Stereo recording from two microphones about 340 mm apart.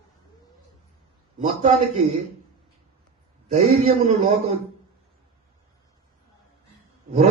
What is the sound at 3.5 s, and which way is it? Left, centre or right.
Speech, right.